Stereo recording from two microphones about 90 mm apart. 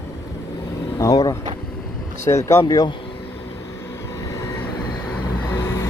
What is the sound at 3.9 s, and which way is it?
Vehicle, 30° left (ahead or behind).